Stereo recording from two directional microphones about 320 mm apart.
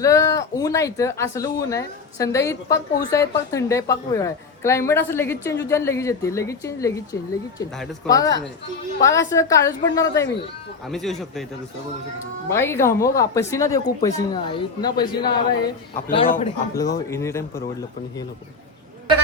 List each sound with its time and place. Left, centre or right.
0.0 s speech: centre
12.5 s speech: centre
16.0 s a man's voice: left
16.7 s speech: centre